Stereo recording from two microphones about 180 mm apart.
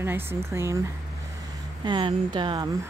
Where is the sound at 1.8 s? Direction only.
25° right (ahead or behind).